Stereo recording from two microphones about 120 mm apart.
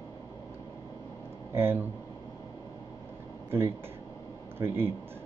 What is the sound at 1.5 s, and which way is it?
Speech, 20° right (ahead or behind).